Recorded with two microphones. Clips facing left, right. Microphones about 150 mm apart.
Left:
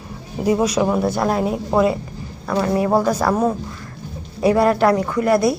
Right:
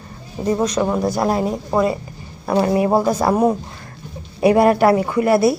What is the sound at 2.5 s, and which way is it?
Speech, 30° right (ahead or behind).